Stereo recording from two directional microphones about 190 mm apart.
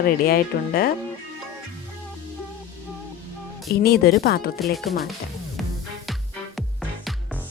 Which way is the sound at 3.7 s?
55° left (ahead or behind).